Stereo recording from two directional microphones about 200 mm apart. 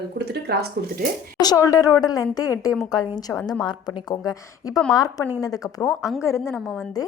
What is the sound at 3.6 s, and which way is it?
A woman's voice, 20° left (ahead or behind).